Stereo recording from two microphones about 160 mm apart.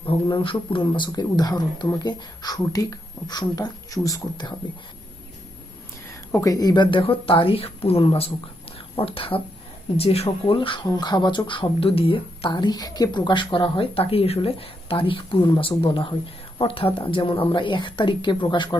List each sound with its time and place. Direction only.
0.1 s speech: 30° left (ahead or behind)
6.3 s speech: 20° left (ahead or behind)